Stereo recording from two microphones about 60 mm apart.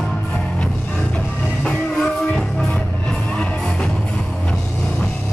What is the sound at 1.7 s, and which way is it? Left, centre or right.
Music, centre.